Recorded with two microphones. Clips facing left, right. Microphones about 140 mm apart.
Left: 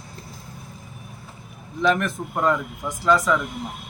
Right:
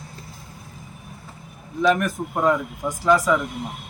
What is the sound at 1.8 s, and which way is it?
A man's voice, 10° right (ahead or behind).